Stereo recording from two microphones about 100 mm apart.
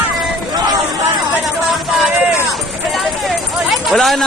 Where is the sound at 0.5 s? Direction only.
45° right (ahead or behind).